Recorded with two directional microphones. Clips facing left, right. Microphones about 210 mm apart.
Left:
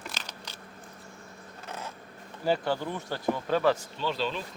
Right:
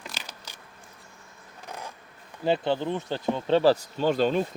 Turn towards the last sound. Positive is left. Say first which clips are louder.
# right 8 dB
turn(degrees=-50)  # may be behind; listen again after turning